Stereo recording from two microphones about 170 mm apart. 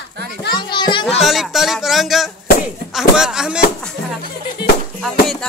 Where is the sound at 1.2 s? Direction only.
Centre (ahead or behind).